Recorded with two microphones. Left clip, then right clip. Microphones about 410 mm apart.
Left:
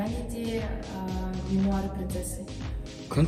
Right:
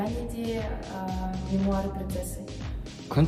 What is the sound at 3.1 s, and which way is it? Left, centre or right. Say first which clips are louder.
Speech: right 2 dB; right.